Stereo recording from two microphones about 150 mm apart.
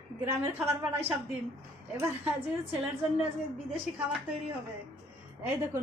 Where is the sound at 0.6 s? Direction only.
10° right (ahead or behind).